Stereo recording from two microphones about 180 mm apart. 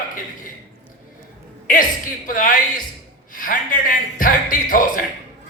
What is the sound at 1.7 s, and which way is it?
A man's voice, 50° left (ahead or behind).